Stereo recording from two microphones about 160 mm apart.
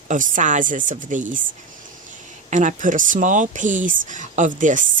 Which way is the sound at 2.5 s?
50° right (ahead or behind).